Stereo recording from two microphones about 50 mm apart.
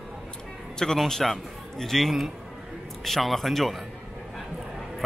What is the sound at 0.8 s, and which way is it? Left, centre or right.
A man's voice, centre.